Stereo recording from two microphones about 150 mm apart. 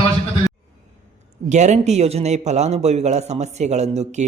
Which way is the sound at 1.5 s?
50° right (ahead or behind).